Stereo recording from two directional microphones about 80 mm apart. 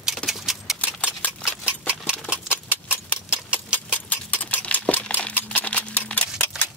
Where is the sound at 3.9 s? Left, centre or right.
Centre.